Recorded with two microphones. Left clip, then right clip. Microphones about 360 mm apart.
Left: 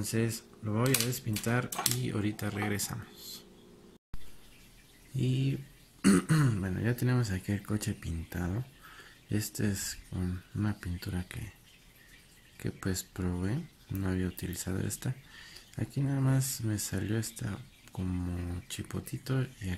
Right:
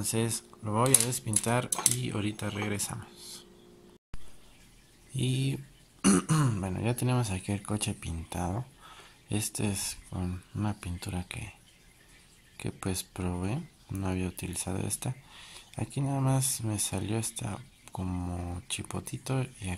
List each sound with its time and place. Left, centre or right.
0.0 s speech: centre
5.1 s speech: centre
12.5 s speech: centre